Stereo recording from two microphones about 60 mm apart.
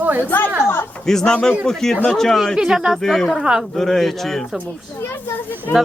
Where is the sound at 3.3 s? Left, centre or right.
Centre.